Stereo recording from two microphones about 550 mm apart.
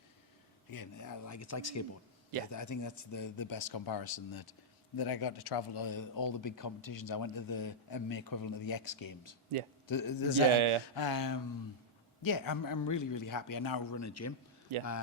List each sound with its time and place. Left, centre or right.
0.7 s speech: left
10.5 s speech: right
10.9 s speech: left
14.7 s speech: right